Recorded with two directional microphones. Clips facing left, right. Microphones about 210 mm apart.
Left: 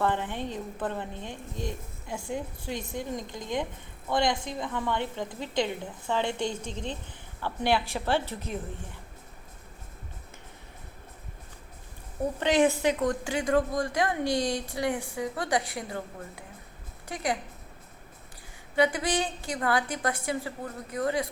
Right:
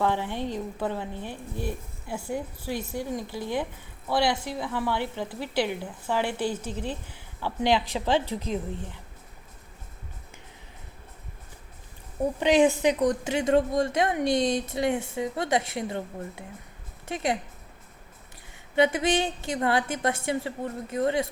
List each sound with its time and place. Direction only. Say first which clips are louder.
0.0 s a woman's voice: right 2 dB; 10° right (ahead or behind)
12.4 s a woman's voice: right 3 dB; 15° right (ahead or behind)
18.8 s a woman's voice: right 3 dB; 25° right (ahead or behind)